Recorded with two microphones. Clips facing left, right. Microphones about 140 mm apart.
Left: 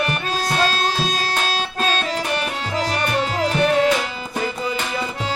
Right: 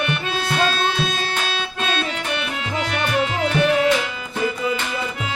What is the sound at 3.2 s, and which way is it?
Music, 35° left (ahead or behind).